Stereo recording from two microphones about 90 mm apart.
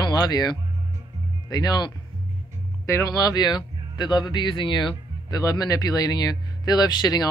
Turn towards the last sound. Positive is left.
turn(degrees=50)  # may be behind; listen again after turning